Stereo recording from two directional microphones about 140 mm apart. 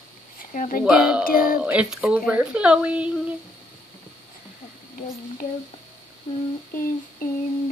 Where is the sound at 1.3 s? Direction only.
90° left.